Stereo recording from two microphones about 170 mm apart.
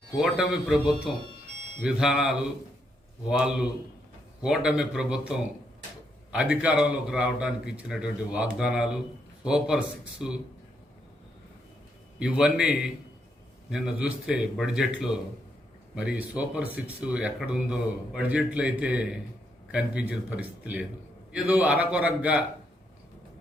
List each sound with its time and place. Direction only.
0.2 s a man's voice: 5° right (ahead or behind)
12.2 s a man's voice: 5° right (ahead or behind)